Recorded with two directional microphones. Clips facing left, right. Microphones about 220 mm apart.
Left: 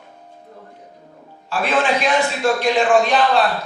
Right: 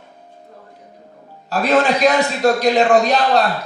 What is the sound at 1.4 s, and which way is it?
A man's voice, 40° right (ahead or behind).